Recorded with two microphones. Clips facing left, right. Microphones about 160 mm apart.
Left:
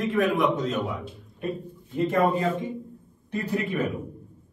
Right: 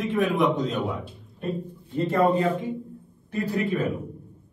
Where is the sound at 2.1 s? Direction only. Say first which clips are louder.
Right 2 dB; 10° left (ahead or behind).